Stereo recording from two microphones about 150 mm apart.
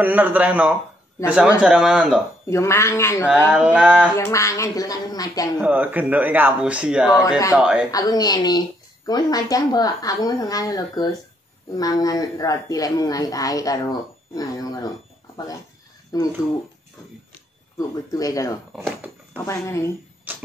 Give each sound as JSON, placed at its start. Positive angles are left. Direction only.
{"t": 0.0, "sound": "speech", "side_deg": -10}
{"t": 2.5, "sound": "a woman's voice", "side_deg": 20}
{"t": 3.5, "sound": "speech", "side_deg": -10}
{"t": 4.2, "sound": "a woman's voice", "side_deg": 20}
{"t": 5.6, "sound": "speech", "side_deg": -10}
{"t": 7.9, "sound": "a woman's voice", "side_deg": 25}
{"t": 17.7, "sound": "a woman's voice", "side_deg": 20}